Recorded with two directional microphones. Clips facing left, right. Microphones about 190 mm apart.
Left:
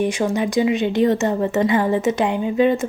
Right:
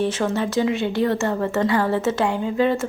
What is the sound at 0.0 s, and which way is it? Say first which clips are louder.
Speech: left 2 dB; 15° left (ahead or behind).